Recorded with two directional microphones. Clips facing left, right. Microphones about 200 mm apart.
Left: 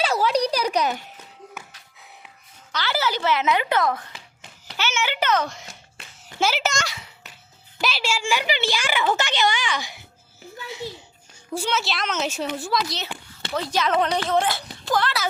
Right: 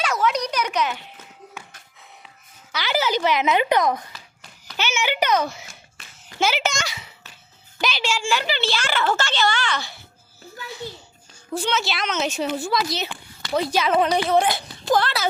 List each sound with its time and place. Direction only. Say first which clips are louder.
0.0 s a sound: left 2 dB; 35° left (ahead or behind)
2.7 s a child's voice: right 2 dB; 15° right (ahead or behind); by 10.8 s 20° left (ahead or behind)
11.5 s a woman's voice: right 1 dB; 5° left (ahead or behind); by 14.9 s 15° right (ahead or behind)
14.9 s speech: right 2 dB; 30° right (ahead or behind)